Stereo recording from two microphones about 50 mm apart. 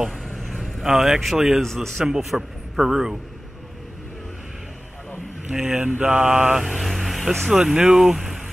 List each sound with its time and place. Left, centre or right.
0.0 s vehicle: centre
1.6 s speech: centre
2.0 s a man's voice: centre
5.8 s mantra: right
6.7 s vehicle: centre
7.7 s a man's voice: centre